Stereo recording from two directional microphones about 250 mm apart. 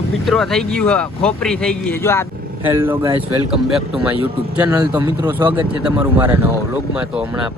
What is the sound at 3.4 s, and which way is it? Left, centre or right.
Speech, centre.